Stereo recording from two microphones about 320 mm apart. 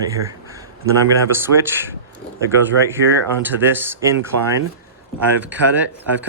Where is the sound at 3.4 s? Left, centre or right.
Centre.